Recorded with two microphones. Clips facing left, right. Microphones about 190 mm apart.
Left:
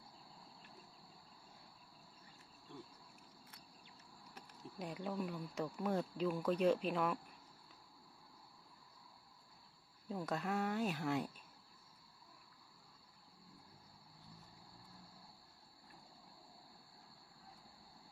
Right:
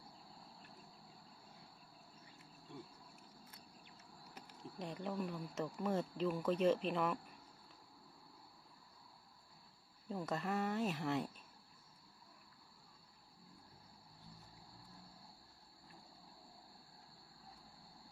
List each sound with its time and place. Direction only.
4.2 s speech: centre (ahead or behind)
10.1 s speech: centre (ahead or behind)